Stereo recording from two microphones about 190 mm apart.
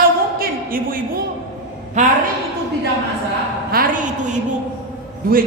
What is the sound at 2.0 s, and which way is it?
Speech, 40° right (ahead or behind).